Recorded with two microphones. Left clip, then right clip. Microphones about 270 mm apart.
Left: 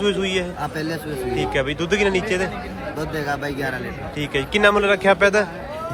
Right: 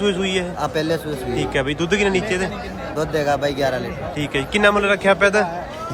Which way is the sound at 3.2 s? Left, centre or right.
Right.